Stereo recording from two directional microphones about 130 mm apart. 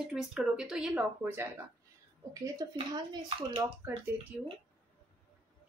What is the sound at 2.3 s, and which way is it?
Speech, 25° right (ahead or behind).